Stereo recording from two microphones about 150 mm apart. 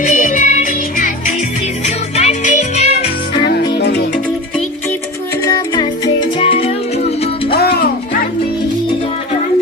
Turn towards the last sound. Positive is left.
turn(degrees=90)